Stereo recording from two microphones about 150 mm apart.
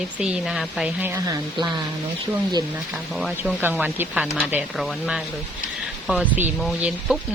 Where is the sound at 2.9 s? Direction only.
Centre (ahead or behind).